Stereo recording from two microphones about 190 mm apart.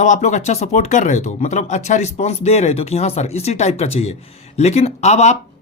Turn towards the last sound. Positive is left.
turn(degrees=35)  # may be behind; listen again after turning